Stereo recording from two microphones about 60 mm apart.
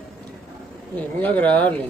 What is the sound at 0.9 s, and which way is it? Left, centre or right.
Speech, left.